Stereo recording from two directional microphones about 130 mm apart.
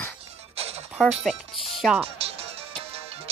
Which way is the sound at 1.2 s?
Centre (ahead or behind).